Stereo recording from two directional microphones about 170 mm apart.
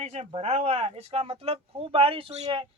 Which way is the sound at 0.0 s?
40° right (ahead or behind).